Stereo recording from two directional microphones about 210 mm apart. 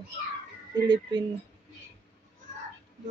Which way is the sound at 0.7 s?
20° right (ahead or behind).